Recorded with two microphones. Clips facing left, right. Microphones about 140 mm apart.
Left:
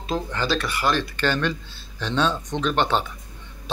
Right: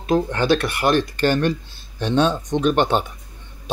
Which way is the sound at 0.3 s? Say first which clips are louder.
Right 6 dB; 55° right (ahead or behind).